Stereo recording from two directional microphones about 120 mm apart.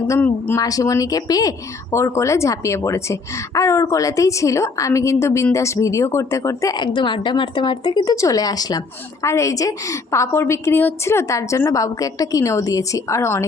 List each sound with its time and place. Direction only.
0.2 s speech: 15° left (ahead or behind)
0.6 s speech: 30° left (ahead or behind)
8.1 s speech: 25° left (ahead or behind)